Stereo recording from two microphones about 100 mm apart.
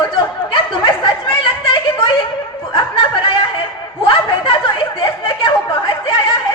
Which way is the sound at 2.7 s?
55° left (ahead or behind).